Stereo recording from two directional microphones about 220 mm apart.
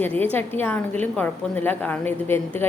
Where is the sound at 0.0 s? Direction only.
10° left (ahead or behind).